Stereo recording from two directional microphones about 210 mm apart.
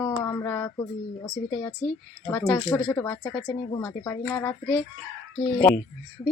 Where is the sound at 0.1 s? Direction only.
15° left (ahead or behind).